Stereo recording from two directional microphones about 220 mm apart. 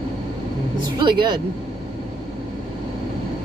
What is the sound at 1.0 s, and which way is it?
Speech, 20° right (ahead or behind).